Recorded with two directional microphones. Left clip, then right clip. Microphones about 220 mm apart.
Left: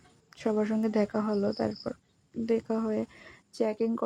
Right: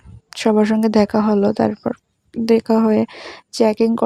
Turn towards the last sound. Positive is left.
turn(degrees=-45)  # may be behind; listen again after turning